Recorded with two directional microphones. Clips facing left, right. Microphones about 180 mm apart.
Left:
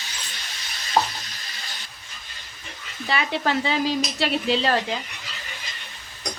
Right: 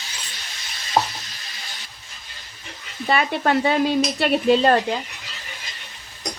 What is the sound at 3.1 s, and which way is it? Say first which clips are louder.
Speech: right 4 dB; 50° right (ahead or behind).